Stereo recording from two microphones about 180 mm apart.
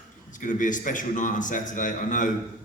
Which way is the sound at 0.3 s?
45° left (ahead or behind).